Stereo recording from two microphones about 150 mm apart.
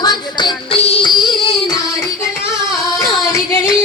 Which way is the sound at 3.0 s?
20° left (ahead or behind).